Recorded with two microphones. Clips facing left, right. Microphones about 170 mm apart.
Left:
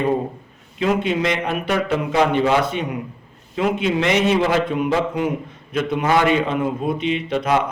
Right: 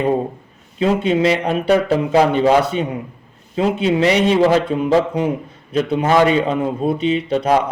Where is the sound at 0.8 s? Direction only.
35° right (ahead or behind).